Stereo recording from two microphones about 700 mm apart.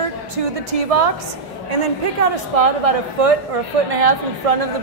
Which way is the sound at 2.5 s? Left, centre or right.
Right.